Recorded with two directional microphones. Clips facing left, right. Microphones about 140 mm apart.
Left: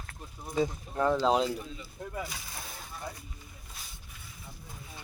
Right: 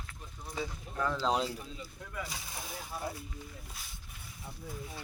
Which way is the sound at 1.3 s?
Centre (ahead or behind).